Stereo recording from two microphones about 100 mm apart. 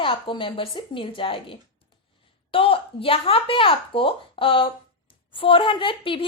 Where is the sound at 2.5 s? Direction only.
65° left (ahead or behind).